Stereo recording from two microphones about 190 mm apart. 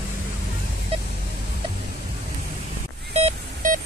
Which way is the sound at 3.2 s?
40° right (ahead or behind).